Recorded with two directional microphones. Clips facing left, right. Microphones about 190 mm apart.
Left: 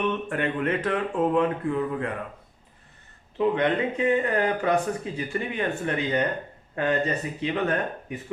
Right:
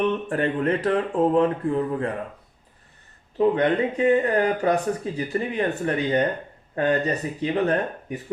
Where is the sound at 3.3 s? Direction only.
35° right (ahead or behind).